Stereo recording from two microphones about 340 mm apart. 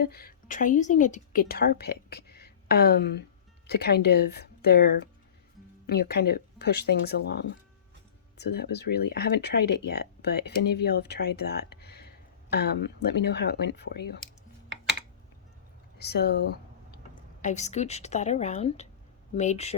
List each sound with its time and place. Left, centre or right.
0.0 s a woman's voice: left
16.0 s a sound: left
17.4 s speech: centre